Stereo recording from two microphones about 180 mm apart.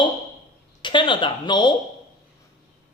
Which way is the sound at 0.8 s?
25° left (ahead or behind).